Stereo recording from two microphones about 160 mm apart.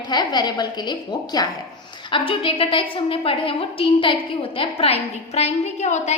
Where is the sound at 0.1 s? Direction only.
25° left (ahead or behind).